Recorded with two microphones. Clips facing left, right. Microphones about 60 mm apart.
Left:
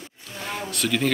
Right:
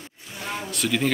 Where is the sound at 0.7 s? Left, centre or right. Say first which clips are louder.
Even; centre.